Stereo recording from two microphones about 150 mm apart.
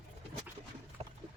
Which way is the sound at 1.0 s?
40° right (ahead or behind).